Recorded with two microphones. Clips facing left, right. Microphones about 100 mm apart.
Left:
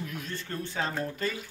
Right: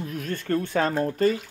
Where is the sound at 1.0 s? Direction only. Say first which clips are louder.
Right 10 dB; 40° right (ahead or behind).